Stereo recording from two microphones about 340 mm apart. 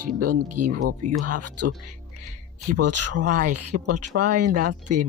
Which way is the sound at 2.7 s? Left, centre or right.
Right.